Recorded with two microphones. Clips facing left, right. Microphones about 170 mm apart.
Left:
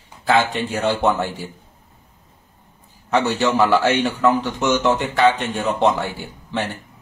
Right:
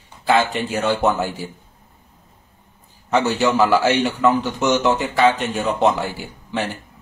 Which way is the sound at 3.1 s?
Centre (ahead or behind).